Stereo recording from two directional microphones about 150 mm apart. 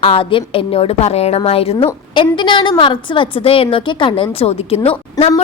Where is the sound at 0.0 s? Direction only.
40° left (ahead or behind).